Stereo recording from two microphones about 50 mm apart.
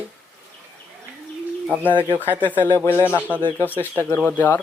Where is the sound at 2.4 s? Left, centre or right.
Left.